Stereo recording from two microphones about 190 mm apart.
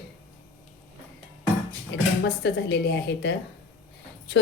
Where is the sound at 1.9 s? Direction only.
65° left (ahead or behind).